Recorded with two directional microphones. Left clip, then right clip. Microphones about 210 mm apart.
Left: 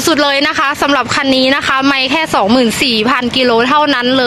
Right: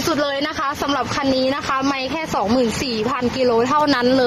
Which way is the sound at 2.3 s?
35° left (ahead or behind).